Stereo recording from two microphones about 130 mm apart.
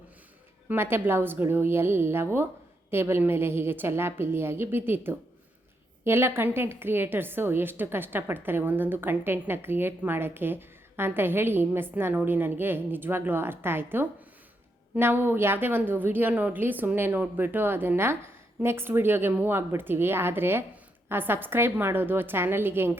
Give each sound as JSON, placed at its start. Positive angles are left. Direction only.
{"t": 0.7, "sound": "a woman's voice", "side_deg": -15}